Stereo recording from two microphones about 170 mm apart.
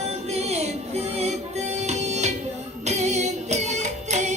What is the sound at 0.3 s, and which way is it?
Music, 40° right (ahead or behind).